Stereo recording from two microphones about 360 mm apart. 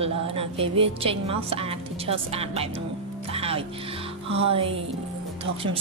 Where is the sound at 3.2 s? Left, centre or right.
Centre.